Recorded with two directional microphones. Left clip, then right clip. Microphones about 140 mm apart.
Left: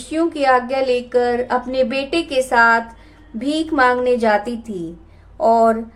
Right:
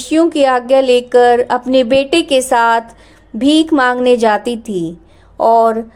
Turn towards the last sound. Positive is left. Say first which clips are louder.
# right 4 dB
turn(degrees=-65)  # may be behind; listen again after turning